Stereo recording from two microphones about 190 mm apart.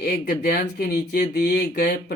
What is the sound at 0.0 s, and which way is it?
Speech, 50° left (ahead or behind).